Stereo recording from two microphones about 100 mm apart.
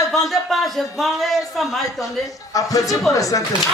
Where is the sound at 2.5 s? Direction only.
35° left (ahead or behind).